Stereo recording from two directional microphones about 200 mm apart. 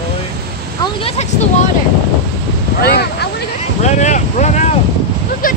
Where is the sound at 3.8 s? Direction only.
35° left (ahead or behind).